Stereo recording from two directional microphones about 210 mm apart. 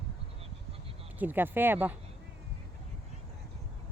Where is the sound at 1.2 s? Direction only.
10° right (ahead or behind).